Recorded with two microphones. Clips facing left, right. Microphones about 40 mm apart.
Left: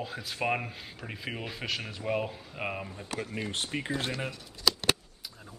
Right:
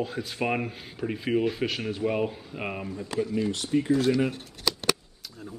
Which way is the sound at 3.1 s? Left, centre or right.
Left.